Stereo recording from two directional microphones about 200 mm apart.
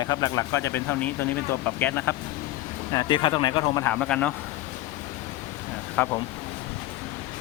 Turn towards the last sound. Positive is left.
turn(degrees=5)  # may be behind; listen again after turning